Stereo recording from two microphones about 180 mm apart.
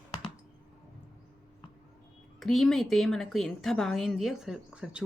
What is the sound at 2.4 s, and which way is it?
A woman's voice, centre (ahead or behind).